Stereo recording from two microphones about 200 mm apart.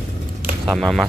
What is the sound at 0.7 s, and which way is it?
Speech, centre (ahead or behind).